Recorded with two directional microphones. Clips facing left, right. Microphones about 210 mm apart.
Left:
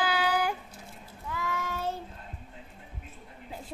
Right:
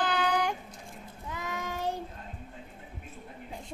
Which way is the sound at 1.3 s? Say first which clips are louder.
Left 2 dB; 20° right (ahead or behind).